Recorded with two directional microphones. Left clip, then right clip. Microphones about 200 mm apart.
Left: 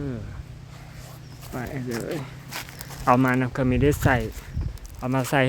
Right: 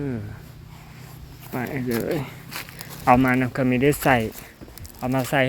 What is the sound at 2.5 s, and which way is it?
Walk, 15° right (ahead or behind).